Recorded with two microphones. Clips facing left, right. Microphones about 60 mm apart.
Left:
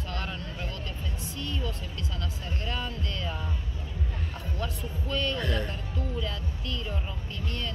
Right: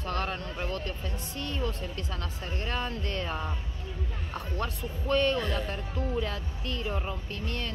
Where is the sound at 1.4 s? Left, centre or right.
Right.